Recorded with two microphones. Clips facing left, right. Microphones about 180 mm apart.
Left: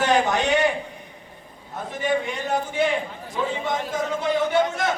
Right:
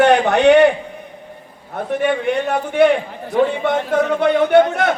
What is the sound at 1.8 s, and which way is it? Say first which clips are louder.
A man's voice: right 6 dB; 65° right (ahead or behind).